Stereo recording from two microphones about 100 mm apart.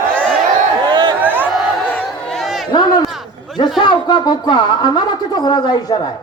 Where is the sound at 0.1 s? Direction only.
10° left (ahead or behind).